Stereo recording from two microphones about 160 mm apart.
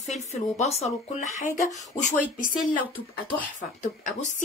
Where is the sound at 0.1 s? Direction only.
45° left (ahead or behind).